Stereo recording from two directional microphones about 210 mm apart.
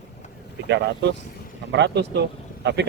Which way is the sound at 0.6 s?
55° right (ahead or behind).